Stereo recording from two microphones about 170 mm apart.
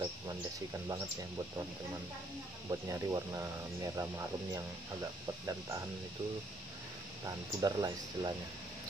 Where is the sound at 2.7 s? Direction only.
20° right (ahead or behind).